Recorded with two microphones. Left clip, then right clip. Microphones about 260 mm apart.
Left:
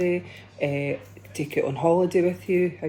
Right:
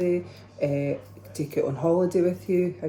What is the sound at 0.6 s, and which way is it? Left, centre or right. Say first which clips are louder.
Speech: even; left.